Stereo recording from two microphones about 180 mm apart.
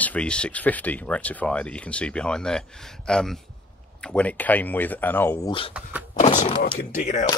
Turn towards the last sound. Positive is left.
turn(degrees=40)  # may be behind; listen again after turning